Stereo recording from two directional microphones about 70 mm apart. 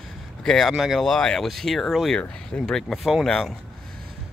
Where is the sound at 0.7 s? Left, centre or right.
Centre.